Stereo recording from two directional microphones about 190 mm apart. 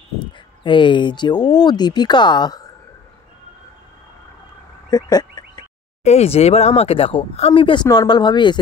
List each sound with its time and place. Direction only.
0.7 s speech: 25° left (ahead or behind)
4.8 s fowl: 20° left (ahead or behind)
6.0 s speech: 35° left (ahead or behind)